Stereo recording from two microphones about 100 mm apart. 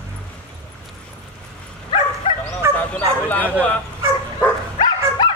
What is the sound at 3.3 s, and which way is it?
Bow-wow, 15° left (ahead or behind).